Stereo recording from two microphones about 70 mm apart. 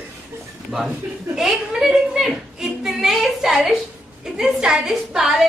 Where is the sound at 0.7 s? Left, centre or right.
Centre.